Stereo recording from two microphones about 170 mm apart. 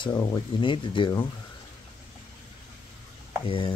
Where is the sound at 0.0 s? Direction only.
25° left (ahead or behind).